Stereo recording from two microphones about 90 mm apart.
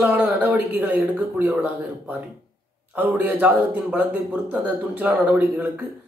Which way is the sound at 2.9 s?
20° right (ahead or behind).